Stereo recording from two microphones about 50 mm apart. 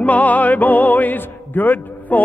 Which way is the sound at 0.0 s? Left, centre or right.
Left.